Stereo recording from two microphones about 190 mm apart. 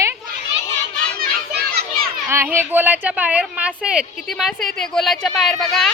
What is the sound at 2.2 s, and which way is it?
A woman's voice, 15° right (ahead or behind).